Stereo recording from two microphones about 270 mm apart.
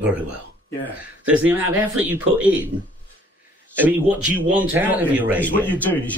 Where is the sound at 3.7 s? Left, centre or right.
Centre.